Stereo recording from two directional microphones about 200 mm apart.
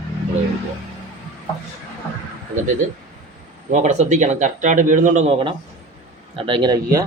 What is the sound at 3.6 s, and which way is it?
Speech, 40° right (ahead or behind).